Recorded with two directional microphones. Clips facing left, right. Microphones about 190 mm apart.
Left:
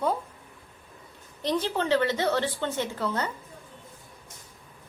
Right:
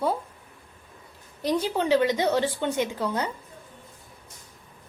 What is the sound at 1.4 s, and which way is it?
A woman's voice, 10° right (ahead or behind).